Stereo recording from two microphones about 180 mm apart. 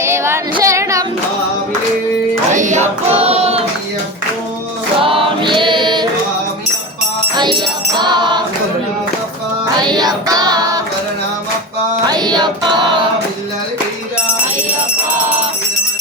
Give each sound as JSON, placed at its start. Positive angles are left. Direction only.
{"t": 0.0, "sound": "female singing", "side_deg": -15}
{"t": 2.5, "sound": "child singing", "side_deg": -45}
{"t": 4.9, "sound": "choir", "side_deg": -30}
{"t": 7.3, "sound": "music", "side_deg": -25}
{"t": 9.7, "sound": "child singing", "side_deg": -25}
{"t": 12.0, "sound": "music", "side_deg": -25}